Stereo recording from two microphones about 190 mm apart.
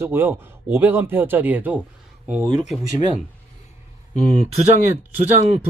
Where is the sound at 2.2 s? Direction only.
35° right (ahead or behind).